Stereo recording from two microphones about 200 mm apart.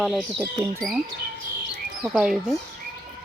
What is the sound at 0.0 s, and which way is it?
Speech, centre (ahead or behind).